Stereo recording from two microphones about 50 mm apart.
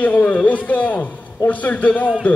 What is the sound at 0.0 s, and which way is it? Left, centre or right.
A man's voice, left.